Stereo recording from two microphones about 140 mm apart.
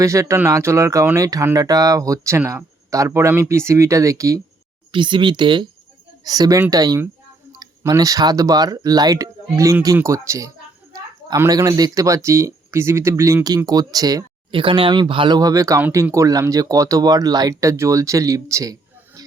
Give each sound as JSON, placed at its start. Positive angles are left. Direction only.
{"t": 0.0, "sound": "speech", "side_deg": -20}
{"t": 4.9, "sound": "speech", "side_deg": -35}
{"t": 14.5, "sound": "speech", "side_deg": -40}